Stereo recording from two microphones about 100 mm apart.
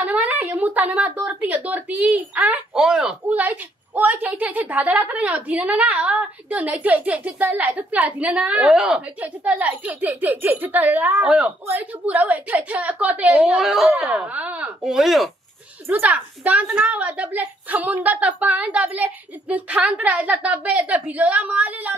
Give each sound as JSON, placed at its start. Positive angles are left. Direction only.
{"t": 0.0, "sound": "a woman's voice", "side_deg": -15}
{"t": 9.2, "sound": "a woman's voice", "side_deg": -15}
{"t": 14.3, "sound": "a woman's voice", "side_deg": -15}
{"t": 14.8, "sound": "speech", "side_deg": -5}
{"t": 15.9, "sound": "a woman's voice", "side_deg": -15}